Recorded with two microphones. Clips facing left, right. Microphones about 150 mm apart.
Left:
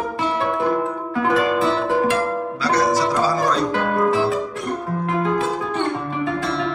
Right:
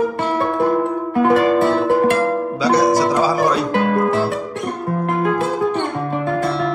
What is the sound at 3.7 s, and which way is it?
Music, 60° right (ahead or behind).